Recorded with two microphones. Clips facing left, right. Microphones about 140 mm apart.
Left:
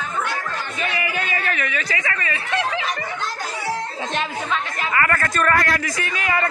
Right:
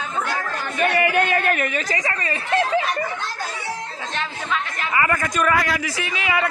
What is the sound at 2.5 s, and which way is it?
Snicker, 45° right (ahead or behind).